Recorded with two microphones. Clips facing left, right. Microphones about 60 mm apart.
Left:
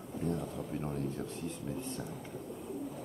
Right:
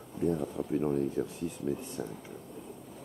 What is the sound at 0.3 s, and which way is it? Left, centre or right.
Speech, centre.